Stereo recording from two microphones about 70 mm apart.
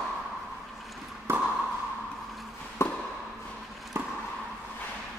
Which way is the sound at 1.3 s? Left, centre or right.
Right.